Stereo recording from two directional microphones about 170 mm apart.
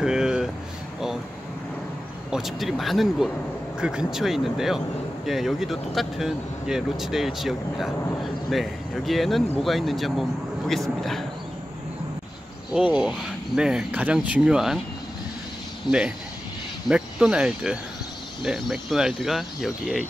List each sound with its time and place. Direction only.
0.0 s a sound: 5° right (ahead or behind)
2.3 s speech: centre (ahead or behind)
12.7 s speech: 5° right (ahead or behind)
15.9 s speech: 25° left (ahead or behind)
16.9 s speech: 5° right (ahead or behind)